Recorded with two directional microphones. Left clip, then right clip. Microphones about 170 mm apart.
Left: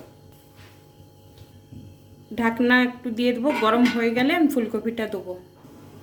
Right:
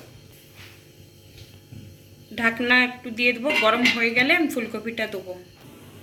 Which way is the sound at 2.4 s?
65° left (ahead or behind).